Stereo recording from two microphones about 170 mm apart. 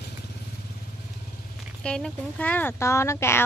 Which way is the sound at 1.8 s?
5° left (ahead or behind).